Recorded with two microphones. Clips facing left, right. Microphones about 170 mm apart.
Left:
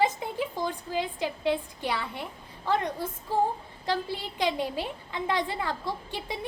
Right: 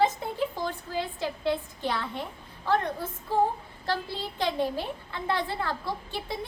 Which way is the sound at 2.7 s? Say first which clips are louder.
Right 1 dB; 10° left (ahead or behind).